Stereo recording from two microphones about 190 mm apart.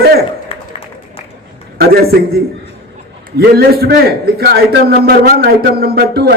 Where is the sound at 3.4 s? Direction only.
55° right (ahead or behind).